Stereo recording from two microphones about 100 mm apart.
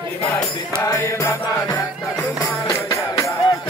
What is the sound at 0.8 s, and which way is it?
Music, 30° left (ahead or behind).